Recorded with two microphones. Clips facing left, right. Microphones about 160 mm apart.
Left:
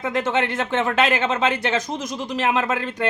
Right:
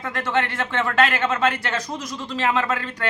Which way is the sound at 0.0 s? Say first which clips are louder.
Left 2 dB; 20° left (ahead or behind).